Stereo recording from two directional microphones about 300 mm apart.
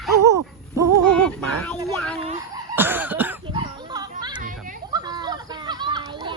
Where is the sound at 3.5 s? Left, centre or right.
Centre.